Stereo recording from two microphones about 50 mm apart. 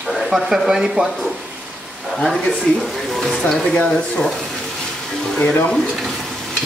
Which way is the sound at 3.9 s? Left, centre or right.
Centre.